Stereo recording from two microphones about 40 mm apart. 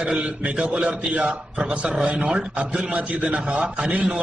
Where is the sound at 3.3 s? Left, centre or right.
Right.